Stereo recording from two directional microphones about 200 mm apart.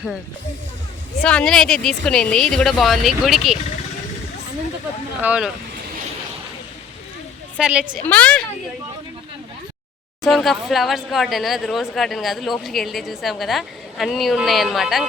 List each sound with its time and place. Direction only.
1.2 s speech: 5° left (ahead or behind)
5.2 s speech: 5° right (ahead or behind)
7.6 s speech: 5° right (ahead or behind)
8.0 s a woman's voice: 5° left (ahead or behind)
10.2 s speech: centre (ahead or behind)